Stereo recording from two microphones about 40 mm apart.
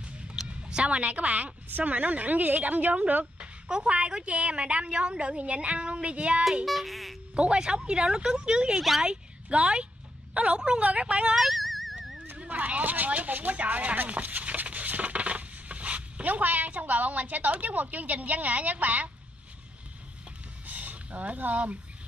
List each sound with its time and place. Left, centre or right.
0.0 s a sound: right
0.8 s a woman's voice: right
3.6 s a woman's voice: right
6.6 s speech: centre
7.3 s a woman's voice: right
8.7 s speech: centre
9.0 s a woman's voice: right
11.3 s a sound: centre
12.4 s speech: right
20.6 s a sound: right